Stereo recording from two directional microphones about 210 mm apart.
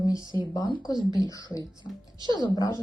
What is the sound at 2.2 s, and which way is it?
Speech, 20° right (ahead or behind).